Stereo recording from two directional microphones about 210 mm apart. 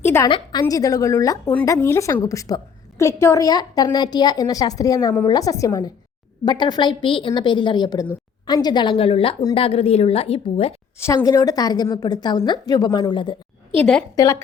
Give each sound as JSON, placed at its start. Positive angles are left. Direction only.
{"t": 0.0, "sound": "a woman's voice", "side_deg": 10}
{"t": 0.3, "sound": "a woman's voice", "side_deg": 25}
{"t": 11.0, "sound": "a woman's voice", "side_deg": 15}
{"t": 13.7, "sound": "a woman's voice", "side_deg": 5}
{"t": 14.2, "sound": "a woman's voice", "side_deg": 15}